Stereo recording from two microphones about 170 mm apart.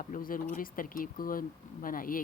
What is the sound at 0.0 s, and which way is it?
Speech, 55° left (ahead or behind).